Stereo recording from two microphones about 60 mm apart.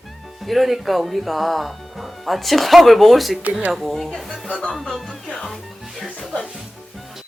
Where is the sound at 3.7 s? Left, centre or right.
Centre.